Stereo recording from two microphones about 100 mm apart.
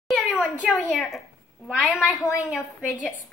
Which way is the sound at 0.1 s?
5° right (ahead or behind).